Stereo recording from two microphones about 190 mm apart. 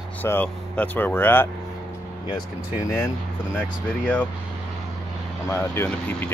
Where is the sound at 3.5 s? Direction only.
10° left (ahead or behind).